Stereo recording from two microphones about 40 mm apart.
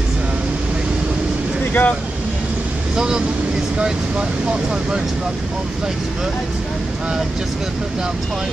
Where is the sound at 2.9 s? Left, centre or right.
Centre.